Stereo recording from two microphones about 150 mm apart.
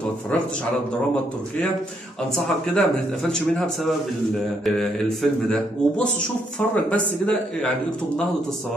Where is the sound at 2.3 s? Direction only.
5° left (ahead or behind).